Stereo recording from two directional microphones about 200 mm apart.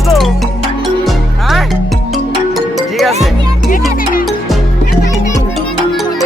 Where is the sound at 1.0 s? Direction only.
Centre (ahead or behind).